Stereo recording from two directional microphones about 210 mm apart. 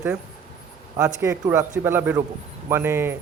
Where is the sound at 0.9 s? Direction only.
15° right (ahead or behind).